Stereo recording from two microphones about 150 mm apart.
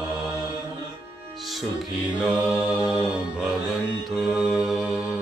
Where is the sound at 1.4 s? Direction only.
Centre (ahead or behind).